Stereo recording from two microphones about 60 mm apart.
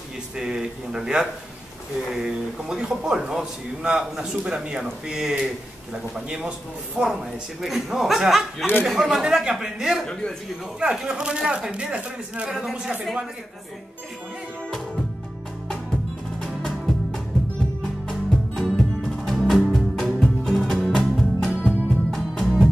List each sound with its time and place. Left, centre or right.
0.4 s a man's voice: centre
7.6 s a man's voice: centre
12.4 s speech: centre
16.3 s music: centre